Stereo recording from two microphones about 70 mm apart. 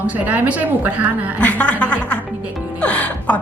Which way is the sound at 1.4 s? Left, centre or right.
Centre.